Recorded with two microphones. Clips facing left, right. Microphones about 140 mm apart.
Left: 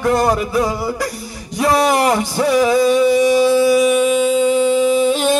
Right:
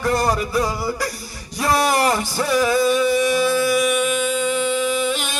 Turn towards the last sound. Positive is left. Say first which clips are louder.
# left 8 dB
turn(degrees=30)  # may be behind; listen again after turning